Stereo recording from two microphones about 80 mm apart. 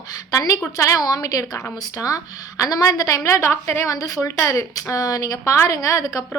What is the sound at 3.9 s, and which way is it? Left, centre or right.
A woman's voice, left.